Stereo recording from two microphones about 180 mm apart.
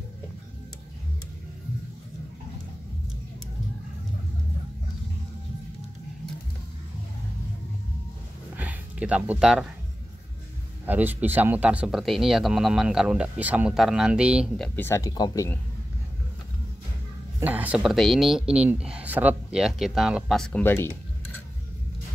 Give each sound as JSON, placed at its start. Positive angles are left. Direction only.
{"t": 8.5, "sound": "a sound", "side_deg": -10}
{"t": 10.9, "sound": "speech", "side_deg": -10}
{"t": 14.8, "sound": "speech", "side_deg": 15}
{"t": 17.4, "sound": "speech", "side_deg": -10}